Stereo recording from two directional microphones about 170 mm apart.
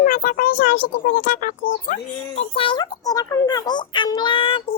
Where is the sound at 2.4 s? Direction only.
30° left (ahead or behind).